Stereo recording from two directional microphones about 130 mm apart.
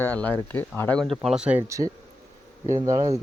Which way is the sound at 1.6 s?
25° right (ahead or behind).